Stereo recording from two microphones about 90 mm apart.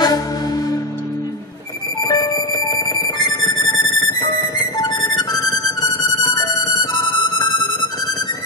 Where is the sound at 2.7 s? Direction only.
50° left (ahead or behind).